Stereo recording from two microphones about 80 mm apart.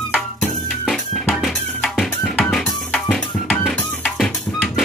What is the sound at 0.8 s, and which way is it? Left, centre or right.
Music, centre.